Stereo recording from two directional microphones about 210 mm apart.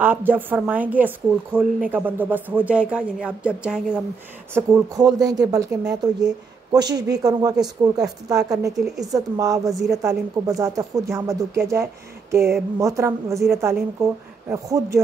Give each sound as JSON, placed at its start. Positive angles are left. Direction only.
{"t": 0.0, "sound": "speech", "side_deg": -10}
{"t": 4.6, "sound": "speech", "side_deg": -15}
{"t": 8.7, "sound": "speech", "side_deg": 0}
{"t": 9.1, "sound": "speech", "side_deg": -15}